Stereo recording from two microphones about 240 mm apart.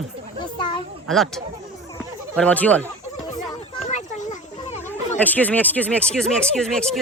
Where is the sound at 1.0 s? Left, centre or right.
Centre.